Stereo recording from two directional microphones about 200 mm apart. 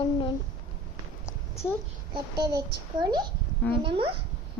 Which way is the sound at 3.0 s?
20° right (ahead or behind).